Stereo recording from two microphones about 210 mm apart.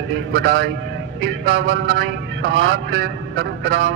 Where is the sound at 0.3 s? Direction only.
60° right (ahead or behind).